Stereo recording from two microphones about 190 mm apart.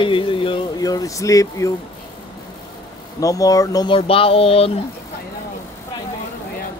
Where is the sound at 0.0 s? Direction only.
25° left (ahead or behind).